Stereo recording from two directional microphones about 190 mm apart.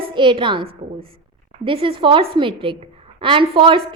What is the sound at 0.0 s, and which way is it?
A woman's voice, 25° right (ahead or behind).